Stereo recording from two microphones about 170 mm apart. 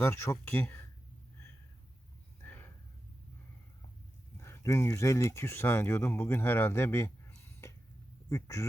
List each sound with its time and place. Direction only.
0.0 s speech: 15° left (ahead or behind)
2.4 s a sound: 10° left (ahead or behind)
4.4 s speech: 15° left (ahead or behind)